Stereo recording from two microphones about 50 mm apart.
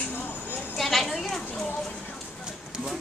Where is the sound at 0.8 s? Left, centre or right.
Centre.